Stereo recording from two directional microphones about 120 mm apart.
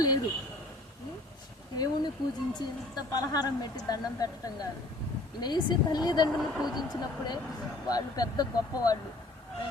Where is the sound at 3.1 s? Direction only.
30° left (ahead or behind).